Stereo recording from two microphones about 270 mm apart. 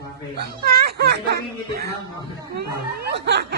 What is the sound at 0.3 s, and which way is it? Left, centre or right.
Speech, right.